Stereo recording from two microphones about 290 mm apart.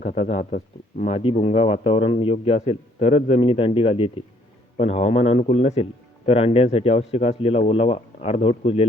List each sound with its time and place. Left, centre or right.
0.0 s a man's voice: left